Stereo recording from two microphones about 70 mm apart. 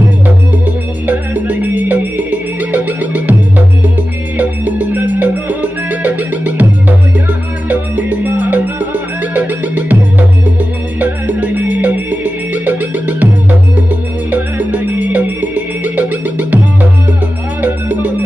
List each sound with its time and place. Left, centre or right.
1.0 s music: right
4.4 s music: right
17.6 s music: right